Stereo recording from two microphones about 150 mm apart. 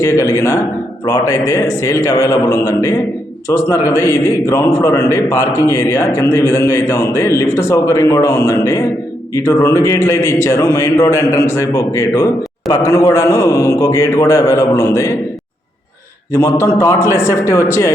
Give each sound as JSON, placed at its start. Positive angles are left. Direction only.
{"t": 0.0, "sound": "a man's voice", "side_deg": 20}
{"t": 16.3, "sound": "a man's voice", "side_deg": 15}